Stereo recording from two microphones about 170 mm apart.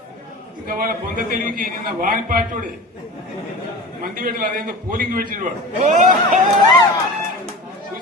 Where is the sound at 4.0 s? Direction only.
60° right (ahead or behind).